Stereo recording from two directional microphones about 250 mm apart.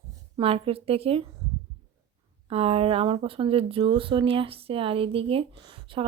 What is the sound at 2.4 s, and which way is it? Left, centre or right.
Speech, right.